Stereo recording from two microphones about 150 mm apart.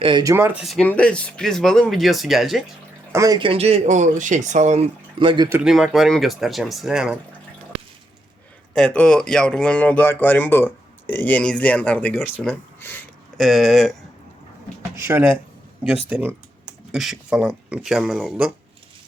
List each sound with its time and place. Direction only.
0.0 s speech: 30° right (ahead or behind)
0.3 s speech: 15° right (ahead or behind)
0.6 s speech: centre (ahead or behind)
3.1 s speech: 20° right (ahead or behind)
3.4 s speech: 40° right (ahead or behind)
5.2 s speech: 35° right (ahead or behind)
5.6 s speech: centre (ahead or behind)
8.7 s speech: 5° left (ahead or behind)
13.3 s speech: centre (ahead or behind)
14.9 s speech: 15° right (ahead or behind)